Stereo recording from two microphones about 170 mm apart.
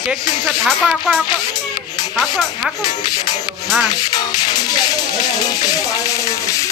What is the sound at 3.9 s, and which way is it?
Music, 25° left (ahead or behind).